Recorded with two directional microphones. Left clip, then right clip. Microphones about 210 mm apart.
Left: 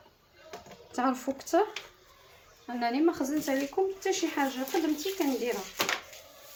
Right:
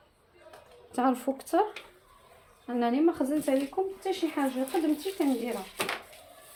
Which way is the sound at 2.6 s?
30° right (ahead or behind).